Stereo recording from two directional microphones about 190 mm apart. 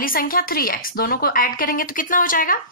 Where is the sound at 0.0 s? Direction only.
50° left (ahead or behind).